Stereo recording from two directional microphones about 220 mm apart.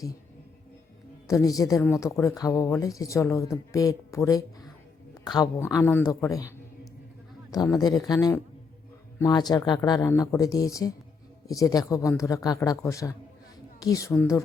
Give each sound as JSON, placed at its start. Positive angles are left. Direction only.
{"t": 1.3, "sound": "speech", "side_deg": 15}
{"t": 7.5, "sound": "speech", "side_deg": 15}